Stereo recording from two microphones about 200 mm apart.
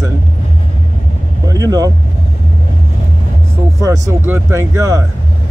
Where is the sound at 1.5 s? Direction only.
20° right (ahead or behind).